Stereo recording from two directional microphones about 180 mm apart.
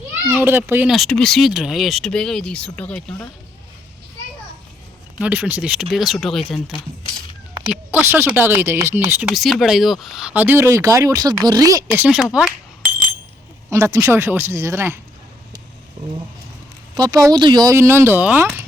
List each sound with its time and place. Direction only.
0.3 s speech: 10° right (ahead or behind)
0.9 s speech: 5° left (ahead or behind)
5.2 s speech: 10° right (ahead or behind)
7.7 s speech: 10° right (ahead or behind)
9.3 s speech: centre (ahead or behind); by 11.9 s 20° right (ahead or behind)
11.9 s speech: 5° right (ahead or behind)
13.7 s speech: 15° right (ahead or behind)
16.9 s speech: 20° right (ahead or behind)